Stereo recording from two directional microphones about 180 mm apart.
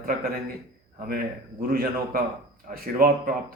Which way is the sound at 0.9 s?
55° right (ahead or behind).